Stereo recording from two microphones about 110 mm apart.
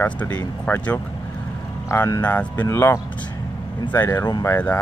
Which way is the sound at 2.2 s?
15° left (ahead or behind).